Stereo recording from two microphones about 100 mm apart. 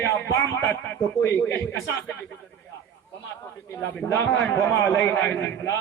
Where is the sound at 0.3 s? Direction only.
30° left (ahead or behind).